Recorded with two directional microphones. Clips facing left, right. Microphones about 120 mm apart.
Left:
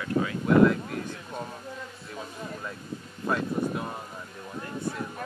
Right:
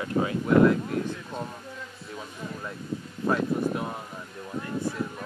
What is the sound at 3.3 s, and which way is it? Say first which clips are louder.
Speech: right 2 dB; centre (ahead or behind).